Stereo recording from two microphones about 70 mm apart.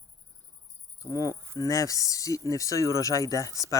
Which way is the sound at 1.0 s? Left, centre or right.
Left.